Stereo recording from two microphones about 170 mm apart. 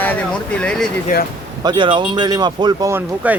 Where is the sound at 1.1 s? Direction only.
60° left (ahead or behind).